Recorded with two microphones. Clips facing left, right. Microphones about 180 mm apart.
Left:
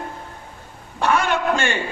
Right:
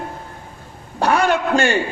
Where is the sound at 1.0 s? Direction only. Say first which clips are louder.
Right 3 dB; 35° right (ahead or behind).